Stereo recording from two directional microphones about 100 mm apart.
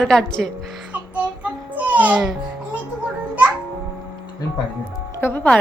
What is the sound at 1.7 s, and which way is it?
Music, 15° right (ahead or behind).